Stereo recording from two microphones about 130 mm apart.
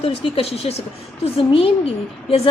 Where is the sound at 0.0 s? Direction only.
50° left (ahead or behind).